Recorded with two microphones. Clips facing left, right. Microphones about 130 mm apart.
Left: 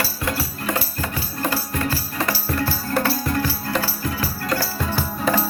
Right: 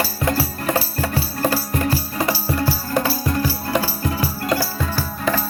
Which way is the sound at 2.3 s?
15° right (ahead or behind).